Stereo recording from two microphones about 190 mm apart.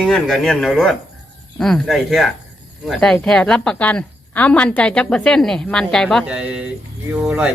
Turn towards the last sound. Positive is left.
turn(degrees=-5)  # may be behind; listen again after turning